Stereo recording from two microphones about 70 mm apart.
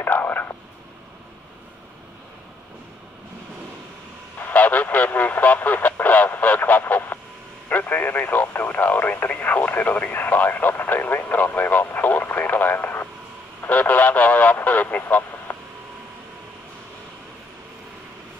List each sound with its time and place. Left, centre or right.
0.0 s radio: left
4.4 s radio: left